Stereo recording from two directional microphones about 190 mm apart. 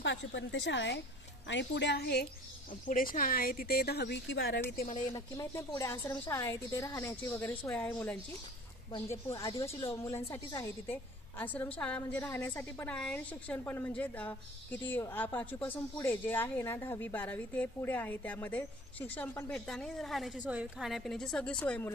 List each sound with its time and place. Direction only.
0.0 s a woman's voice: 70° left (ahead or behind)
2.7 s a woman's voice: 45° left (ahead or behind)
5.1 s a woman's voice: 15° left (ahead or behind)
8.9 s a woman's voice: 15° left (ahead or behind)